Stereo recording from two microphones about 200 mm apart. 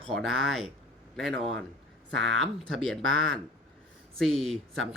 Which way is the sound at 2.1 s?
Centre (ahead or behind).